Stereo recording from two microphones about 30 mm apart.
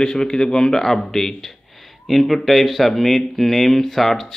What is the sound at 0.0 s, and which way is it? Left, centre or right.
Speech, left.